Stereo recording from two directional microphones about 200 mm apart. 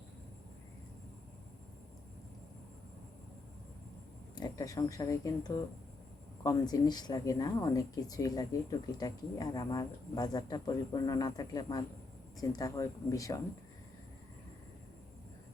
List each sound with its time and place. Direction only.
4.4 s speech: 20° left (ahead or behind)